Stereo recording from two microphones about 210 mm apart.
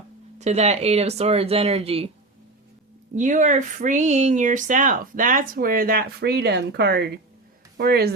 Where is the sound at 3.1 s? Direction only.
35° right (ahead or behind).